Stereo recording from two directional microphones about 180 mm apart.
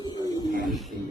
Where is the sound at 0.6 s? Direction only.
Centre (ahead or behind).